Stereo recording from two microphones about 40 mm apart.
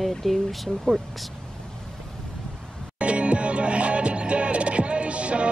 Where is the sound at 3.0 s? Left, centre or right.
Right.